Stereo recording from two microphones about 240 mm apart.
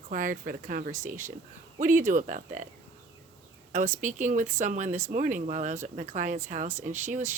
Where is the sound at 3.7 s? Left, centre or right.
Right.